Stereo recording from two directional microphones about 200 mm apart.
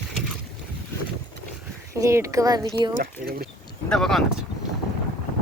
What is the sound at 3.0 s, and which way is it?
Speech, 50° right (ahead or behind).